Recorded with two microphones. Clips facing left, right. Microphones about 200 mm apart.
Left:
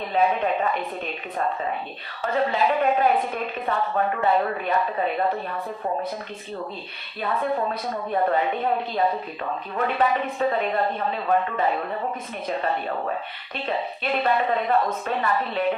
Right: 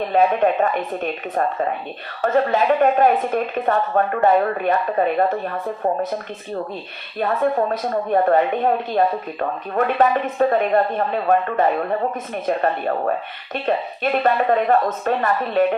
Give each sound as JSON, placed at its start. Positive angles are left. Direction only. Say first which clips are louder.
{"t": 0.1, "sound": "a woman's voice", "louder": "right 4 dB", "side_deg": -45}
{"t": 7.2, "sound": "a woman's voice", "louder": "right 6 dB", "side_deg": -45}